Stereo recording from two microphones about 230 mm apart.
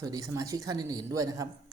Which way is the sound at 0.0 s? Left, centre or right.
Centre.